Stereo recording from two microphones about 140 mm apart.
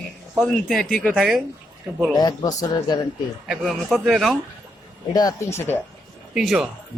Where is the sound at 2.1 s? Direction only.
30° left (ahead or behind).